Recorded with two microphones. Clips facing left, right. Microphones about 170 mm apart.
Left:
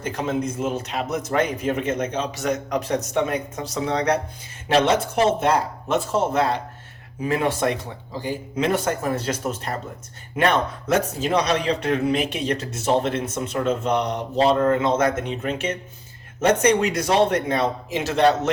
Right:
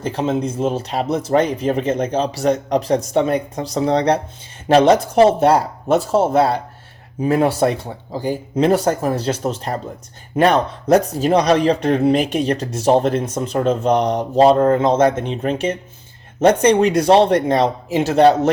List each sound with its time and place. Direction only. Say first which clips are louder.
0.0 s speech: right 5 dB; 30° right (ahead or behind)